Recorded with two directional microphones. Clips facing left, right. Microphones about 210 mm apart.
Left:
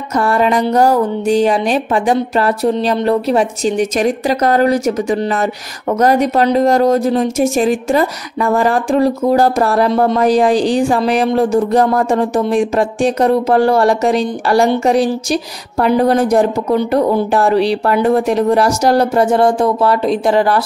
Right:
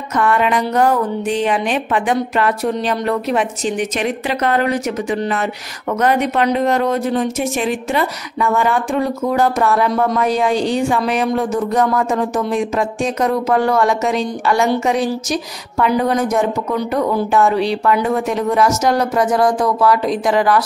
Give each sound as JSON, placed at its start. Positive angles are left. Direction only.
{"t": 0.1, "sound": "a woman's voice", "side_deg": 35}